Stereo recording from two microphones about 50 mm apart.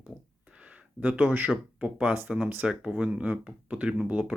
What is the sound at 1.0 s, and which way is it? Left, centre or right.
Speech, right.